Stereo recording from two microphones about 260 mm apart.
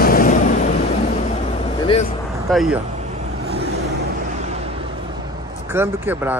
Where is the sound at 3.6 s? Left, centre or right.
Right.